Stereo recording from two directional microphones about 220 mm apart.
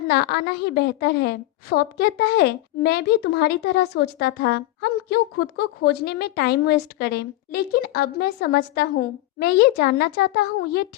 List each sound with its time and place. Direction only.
0.1 s a woman's voice: 45° left (ahead or behind)